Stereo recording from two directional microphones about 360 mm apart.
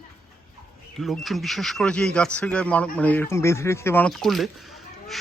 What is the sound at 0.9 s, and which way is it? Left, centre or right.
Speech, centre.